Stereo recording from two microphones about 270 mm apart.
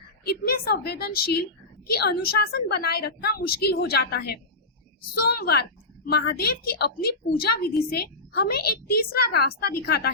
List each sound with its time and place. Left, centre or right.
0.3 s a woman's voice: left